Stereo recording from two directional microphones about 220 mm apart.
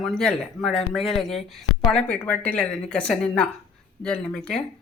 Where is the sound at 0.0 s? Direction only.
5° left (ahead or behind).